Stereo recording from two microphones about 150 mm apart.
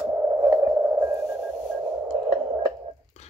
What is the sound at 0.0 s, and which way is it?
Radio, 20° right (ahead or behind).